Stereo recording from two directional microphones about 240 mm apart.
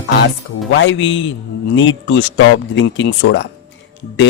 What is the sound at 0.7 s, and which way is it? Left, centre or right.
A man's voice, left.